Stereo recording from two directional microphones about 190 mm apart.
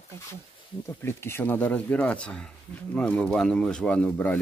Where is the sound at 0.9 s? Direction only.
15° left (ahead or behind).